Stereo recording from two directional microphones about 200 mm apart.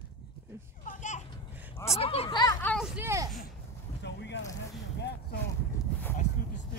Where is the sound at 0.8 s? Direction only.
40° left (ahead or behind).